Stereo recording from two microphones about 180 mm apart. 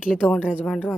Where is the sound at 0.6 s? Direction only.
10° left (ahead or behind).